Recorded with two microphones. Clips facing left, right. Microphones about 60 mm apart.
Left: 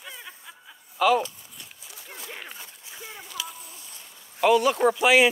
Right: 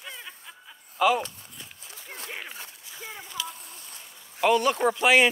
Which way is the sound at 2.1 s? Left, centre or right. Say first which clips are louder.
Right 2 dB; right.